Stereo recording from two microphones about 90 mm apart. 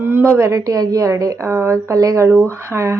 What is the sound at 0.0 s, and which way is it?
A woman's voice, 25° right (ahead or behind).